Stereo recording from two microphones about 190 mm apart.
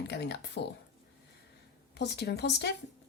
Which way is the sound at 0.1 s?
60° left (ahead or behind).